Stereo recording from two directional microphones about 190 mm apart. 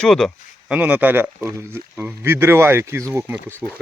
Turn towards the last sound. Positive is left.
turn(degrees=-10)  # may be behind; listen again after turning